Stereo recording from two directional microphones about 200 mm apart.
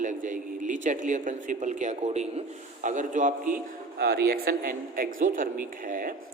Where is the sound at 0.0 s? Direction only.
40° right (ahead or behind).